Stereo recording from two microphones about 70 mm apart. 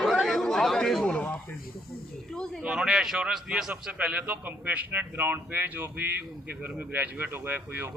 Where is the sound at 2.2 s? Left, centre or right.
Centre.